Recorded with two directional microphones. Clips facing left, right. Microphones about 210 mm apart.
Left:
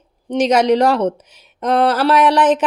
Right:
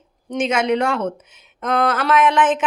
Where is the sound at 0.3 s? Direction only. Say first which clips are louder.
Left 5 dB; 35° left (ahead or behind).